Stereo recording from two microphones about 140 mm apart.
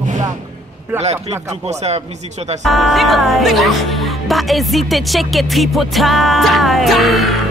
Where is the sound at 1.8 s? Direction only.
50° right (ahead or behind).